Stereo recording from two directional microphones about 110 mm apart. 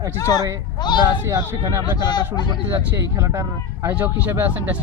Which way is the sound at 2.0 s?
40° left (ahead or behind).